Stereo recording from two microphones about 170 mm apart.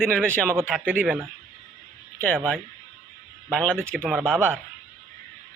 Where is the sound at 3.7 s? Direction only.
10° right (ahead or behind).